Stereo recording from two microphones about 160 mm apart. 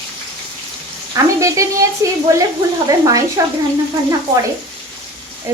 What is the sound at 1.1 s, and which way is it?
Speech, 20° right (ahead or behind).